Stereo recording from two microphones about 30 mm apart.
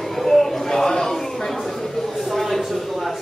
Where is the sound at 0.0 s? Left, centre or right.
Centre.